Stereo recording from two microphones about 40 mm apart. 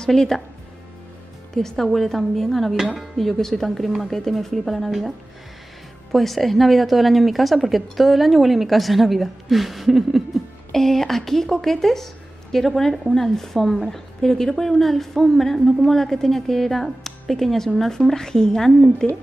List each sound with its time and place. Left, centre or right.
0.0 s a woman's voice: centre
1.5 s a woman's voice: centre
2.7 s speech: centre
3.2 s a woman's voice: centre
6.1 s a woman's voice: centre
10.7 s a woman's voice: centre